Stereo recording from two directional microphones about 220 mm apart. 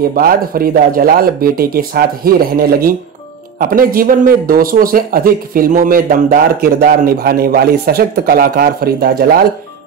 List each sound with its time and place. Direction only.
0.1 s speech: 40° right (ahead or behind)